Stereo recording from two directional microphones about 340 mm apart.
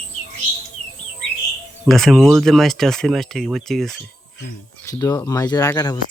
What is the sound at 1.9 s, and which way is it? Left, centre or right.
Speech, centre.